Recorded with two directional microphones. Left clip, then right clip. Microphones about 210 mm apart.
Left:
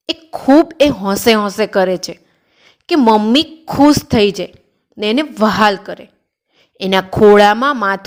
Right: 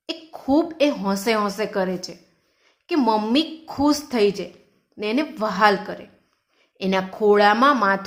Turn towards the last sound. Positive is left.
turn(degrees=35)  # may be behind; listen again after turning